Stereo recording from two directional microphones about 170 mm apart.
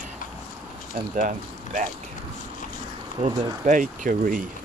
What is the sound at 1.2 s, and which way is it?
Speech, 50° right (ahead or behind).